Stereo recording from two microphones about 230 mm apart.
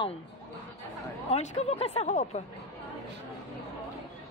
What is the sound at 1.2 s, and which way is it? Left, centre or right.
Speech, left.